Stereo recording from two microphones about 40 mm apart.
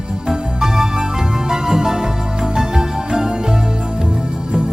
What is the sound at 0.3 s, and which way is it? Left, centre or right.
Music, centre.